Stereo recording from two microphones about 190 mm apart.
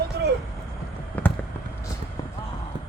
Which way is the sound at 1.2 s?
10° left (ahead or behind).